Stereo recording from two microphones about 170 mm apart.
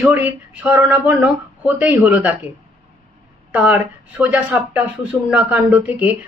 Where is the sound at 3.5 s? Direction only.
10° right (ahead or behind).